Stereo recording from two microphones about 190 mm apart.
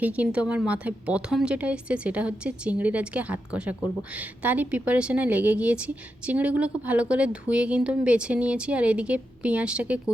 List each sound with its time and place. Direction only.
0.0 s a woman's voice: 5° right (ahead or behind)